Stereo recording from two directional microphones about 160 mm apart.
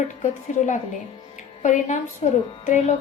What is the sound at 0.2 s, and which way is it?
Speech, 50° left (ahead or behind).